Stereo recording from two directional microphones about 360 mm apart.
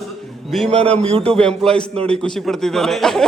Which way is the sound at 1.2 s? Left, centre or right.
Centre.